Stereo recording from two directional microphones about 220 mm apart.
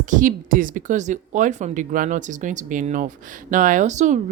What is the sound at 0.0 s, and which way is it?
Speech, 35° right (ahead or behind).